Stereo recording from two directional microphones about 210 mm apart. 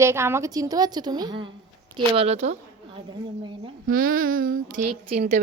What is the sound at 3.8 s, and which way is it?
A woman's voice, 40° right (ahead or behind).